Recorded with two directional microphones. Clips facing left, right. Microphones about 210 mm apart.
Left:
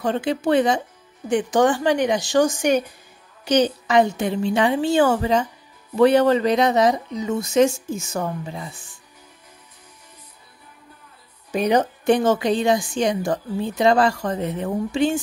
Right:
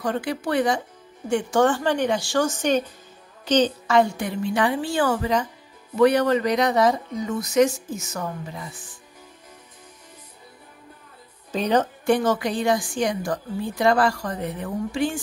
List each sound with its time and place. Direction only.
0.0 s a woman's voice: 25° left (ahead or behind)
11.5 s a woman's voice: 10° left (ahead or behind)